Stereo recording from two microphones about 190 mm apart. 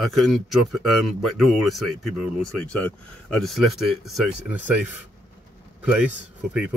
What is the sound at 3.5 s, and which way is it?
A man's voice, centre (ahead or behind).